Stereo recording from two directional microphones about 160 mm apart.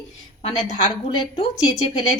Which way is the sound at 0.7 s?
40° left (ahead or behind).